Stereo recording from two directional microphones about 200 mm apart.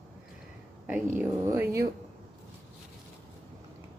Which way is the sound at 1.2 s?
10° right (ahead or behind).